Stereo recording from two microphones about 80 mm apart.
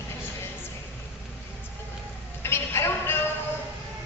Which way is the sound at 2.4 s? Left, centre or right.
Left.